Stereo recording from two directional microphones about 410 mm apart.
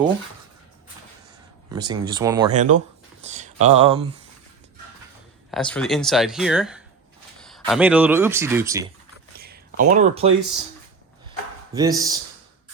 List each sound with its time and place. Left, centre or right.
1.7 s speech: centre
5.5 s speech: centre
9.4 s a sound: right